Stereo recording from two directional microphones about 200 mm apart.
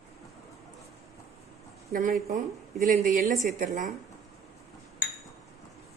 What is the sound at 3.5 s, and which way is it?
Speech, 40° right (ahead or behind).